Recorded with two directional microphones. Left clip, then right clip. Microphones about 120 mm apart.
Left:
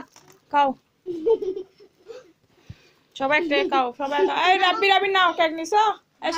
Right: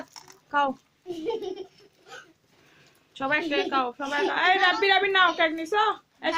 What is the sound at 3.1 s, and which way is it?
A woman's voice, 20° left (ahead or behind).